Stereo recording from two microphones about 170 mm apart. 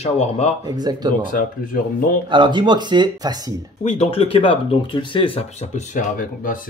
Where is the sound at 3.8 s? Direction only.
40° left (ahead or behind).